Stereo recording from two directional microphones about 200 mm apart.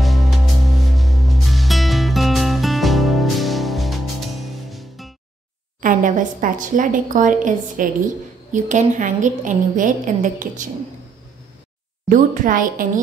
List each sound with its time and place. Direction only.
0.0 s music: centre (ahead or behind)
5.8 s a woman's voice: 40° right (ahead or behind)
12.1 s a woman's voice: 45° right (ahead or behind)